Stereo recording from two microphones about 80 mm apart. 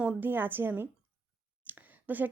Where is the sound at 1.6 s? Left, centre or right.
Right.